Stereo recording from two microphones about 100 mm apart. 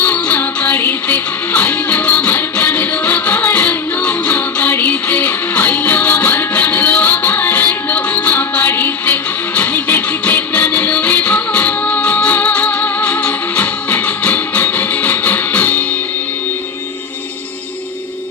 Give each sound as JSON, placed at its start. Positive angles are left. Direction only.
{"t": 0.0, "sound": "music", "side_deg": 15}